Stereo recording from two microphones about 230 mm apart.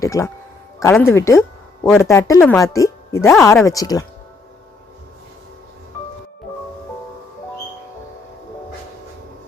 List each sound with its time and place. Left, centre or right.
0.0 s speech: centre